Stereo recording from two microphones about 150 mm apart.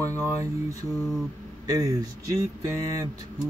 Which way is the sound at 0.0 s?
20° right (ahead or behind).